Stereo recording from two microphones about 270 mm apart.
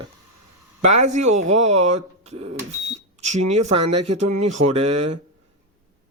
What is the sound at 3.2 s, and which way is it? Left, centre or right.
Speech, right.